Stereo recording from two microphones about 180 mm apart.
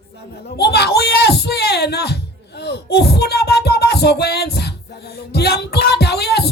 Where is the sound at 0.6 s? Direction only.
65° left (ahead or behind).